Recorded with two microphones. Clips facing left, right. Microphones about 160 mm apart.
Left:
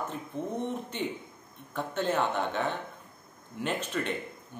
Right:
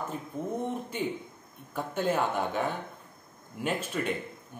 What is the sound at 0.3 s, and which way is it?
Speech, 10° right (ahead or behind).